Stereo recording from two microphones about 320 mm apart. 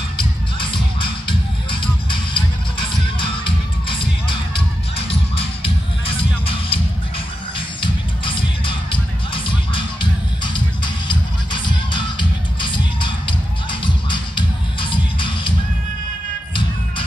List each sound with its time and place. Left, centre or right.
0.6 s music: centre